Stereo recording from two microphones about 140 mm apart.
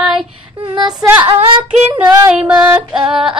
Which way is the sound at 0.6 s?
30° right (ahead or behind).